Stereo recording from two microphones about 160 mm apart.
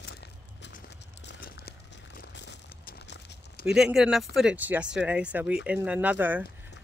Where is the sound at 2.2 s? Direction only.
90° left.